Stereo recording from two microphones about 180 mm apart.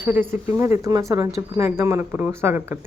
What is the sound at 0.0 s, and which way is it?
Speech, 15° right (ahead or behind).